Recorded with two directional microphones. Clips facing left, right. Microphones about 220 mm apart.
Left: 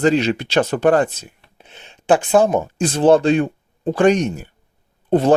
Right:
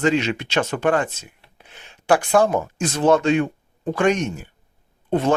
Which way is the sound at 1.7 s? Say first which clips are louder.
Left 3 dB; 25° left (ahead or behind).